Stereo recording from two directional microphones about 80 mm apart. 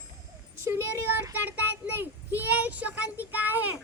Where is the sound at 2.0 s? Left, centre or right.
Right.